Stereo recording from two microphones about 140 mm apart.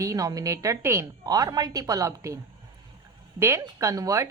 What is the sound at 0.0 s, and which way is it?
Speech, 25° right (ahead or behind).